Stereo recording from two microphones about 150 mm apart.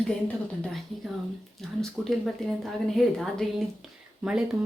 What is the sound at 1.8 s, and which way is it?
Speech, centre (ahead or behind).